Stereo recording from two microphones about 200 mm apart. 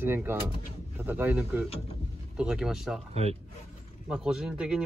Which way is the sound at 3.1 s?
30° right (ahead or behind).